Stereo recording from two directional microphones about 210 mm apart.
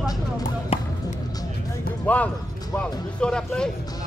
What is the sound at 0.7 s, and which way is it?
Basketball bounce, 30° left (ahead or behind).